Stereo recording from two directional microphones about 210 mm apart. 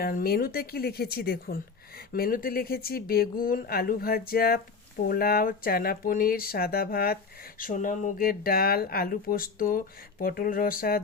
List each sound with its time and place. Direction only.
0.0 s speech: 45° left (ahead or behind)